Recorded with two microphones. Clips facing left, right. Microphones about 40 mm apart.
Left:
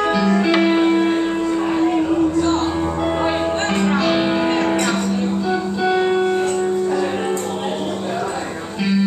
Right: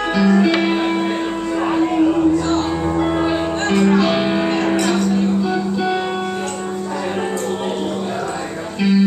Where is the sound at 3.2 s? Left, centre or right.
Centre.